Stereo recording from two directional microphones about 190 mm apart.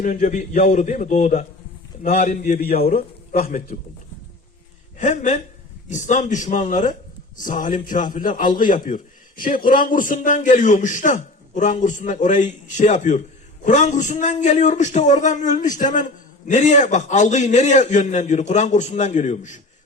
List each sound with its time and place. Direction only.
0.0 s a man's voice: 40° left (ahead or behind)
4.9 s speech: 40° left (ahead or behind)